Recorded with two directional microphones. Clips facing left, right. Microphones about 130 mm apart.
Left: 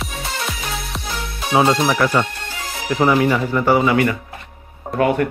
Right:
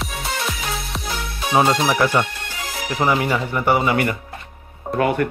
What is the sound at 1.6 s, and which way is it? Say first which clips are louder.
Speech: left 1 dB; 10° right (ahead or behind).